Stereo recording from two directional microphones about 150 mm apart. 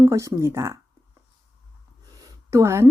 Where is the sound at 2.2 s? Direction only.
20° right (ahead or behind).